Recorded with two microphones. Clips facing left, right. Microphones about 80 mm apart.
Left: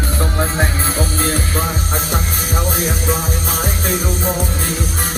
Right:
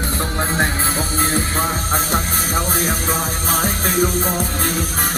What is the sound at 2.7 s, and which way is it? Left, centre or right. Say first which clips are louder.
Music: left 1 dB; right.